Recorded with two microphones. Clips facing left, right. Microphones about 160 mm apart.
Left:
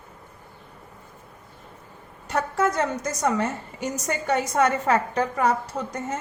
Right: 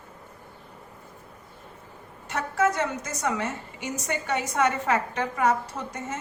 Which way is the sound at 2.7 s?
40° left (ahead or behind).